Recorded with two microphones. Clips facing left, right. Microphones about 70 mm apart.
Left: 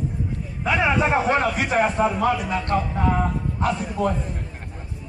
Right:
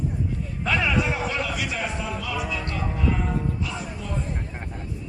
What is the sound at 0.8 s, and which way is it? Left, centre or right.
A man's voice, left.